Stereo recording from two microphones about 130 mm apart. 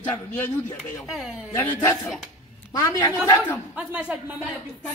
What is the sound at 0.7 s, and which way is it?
Speech, centre (ahead or behind).